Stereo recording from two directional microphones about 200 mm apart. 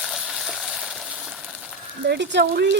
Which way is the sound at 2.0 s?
60° right (ahead or behind).